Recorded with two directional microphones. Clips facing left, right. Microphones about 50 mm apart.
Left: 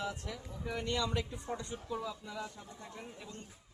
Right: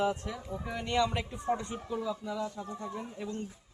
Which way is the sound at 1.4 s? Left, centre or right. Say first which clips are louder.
Right 8 dB; right.